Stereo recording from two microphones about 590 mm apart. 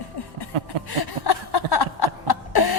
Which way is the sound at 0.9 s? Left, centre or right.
Left.